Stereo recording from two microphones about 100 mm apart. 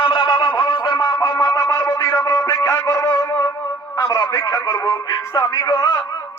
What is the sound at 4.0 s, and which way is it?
Speech, 35° left (ahead or behind).